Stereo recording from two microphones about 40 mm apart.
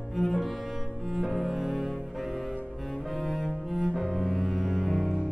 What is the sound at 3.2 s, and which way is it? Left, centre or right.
Cello, centre.